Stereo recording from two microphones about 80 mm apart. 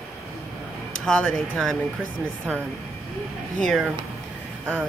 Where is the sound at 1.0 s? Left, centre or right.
Centre.